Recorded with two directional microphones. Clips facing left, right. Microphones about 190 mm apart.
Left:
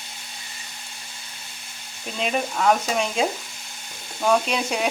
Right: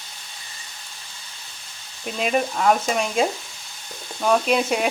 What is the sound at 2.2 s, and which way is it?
Frying, centre (ahead or behind).